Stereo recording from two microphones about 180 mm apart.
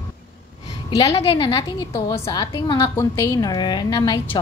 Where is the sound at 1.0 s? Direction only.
35° left (ahead or behind).